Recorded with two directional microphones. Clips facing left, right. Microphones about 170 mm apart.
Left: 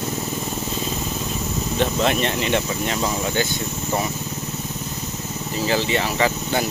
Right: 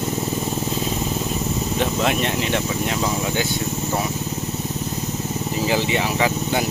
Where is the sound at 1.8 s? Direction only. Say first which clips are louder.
Left 2 dB; 5° right (ahead or behind).